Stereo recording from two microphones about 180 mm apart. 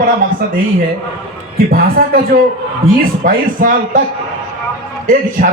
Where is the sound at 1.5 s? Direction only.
55° right (ahead or behind).